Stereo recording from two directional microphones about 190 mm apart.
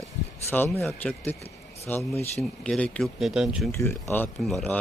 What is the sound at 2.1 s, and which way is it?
Speech, 35° left (ahead or behind).